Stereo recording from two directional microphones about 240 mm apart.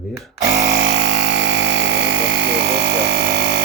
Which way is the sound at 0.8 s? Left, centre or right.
Right.